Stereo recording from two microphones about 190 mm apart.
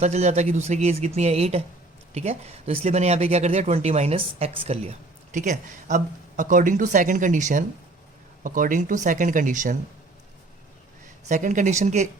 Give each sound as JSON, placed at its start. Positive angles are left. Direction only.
{"t": 0.0, "sound": "speech", "side_deg": -35}
{"t": 11.3, "sound": "speech", "side_deg": -40}